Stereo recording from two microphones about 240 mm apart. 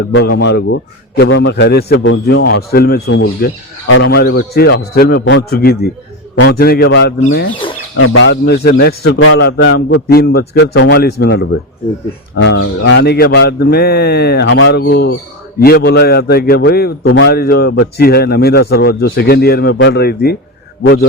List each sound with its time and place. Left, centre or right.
0.0 s a man's voice: left
7.9 s a man's voice: left